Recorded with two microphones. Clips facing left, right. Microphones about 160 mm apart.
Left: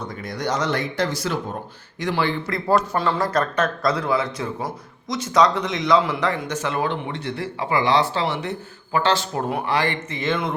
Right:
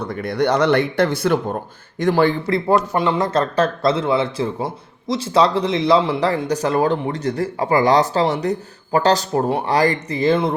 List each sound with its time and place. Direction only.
0.0 s speech: 60° right (ahead or behind)
2.5 s speech: 20° right (ahead or behind)